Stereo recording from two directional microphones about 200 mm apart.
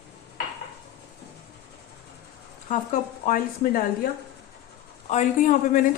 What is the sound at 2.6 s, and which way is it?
A woman's voice, 40° left (ahead or behind).